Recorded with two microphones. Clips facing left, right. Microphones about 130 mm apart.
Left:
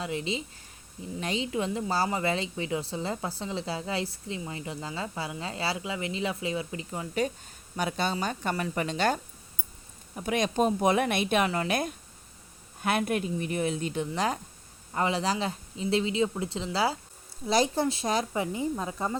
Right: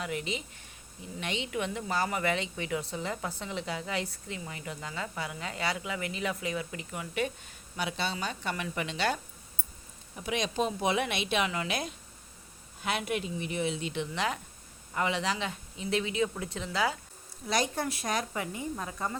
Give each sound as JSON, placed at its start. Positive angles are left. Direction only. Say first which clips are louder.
{"t": 0.0, "sound": "a woman's voice", "louder": "left 3 dB", "side_deg": 25}
{"t": 7.8, "sound": "a woman's voice", "louder": "left 4 dB", "side_deg": 45}